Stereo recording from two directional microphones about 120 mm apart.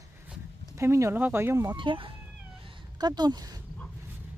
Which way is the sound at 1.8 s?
45° right (ahead or behind).